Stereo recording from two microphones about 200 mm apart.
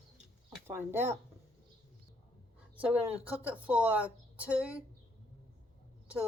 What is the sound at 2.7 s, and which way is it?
A woman's voice, 5° right (ahead or behind).